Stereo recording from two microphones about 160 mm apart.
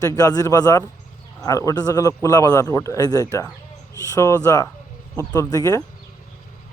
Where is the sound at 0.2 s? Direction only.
20° left (ahead or behind).